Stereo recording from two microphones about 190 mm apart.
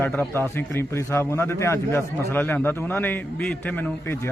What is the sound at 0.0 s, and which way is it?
Speech, 10° left (ahead or behind).